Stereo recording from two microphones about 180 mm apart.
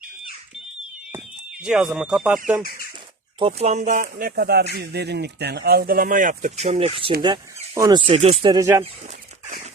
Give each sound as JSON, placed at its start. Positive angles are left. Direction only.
{"t": 1.6, "sound": "speech", "side_deg": -5}
{"t": 3.3, "sound": "speech", "side_deg": -35}